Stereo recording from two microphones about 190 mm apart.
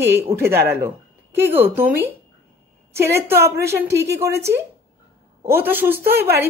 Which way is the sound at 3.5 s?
60° right (ahead or behind).